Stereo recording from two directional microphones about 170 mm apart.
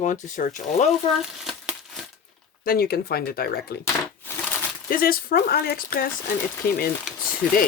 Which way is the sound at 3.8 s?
10° left (ahead or behind).